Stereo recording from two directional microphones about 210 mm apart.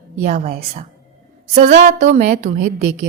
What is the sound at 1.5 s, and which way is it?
A woman's voice, 30° right (ahead or behind).